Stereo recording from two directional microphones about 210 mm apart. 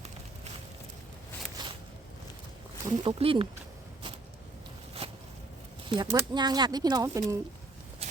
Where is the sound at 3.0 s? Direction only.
25° right (ahead or behind).